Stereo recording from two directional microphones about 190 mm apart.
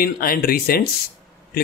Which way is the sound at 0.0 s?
50° left (ahead or behind).